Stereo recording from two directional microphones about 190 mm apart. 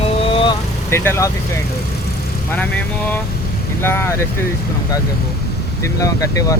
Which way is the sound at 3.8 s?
10° left (ahead or behind).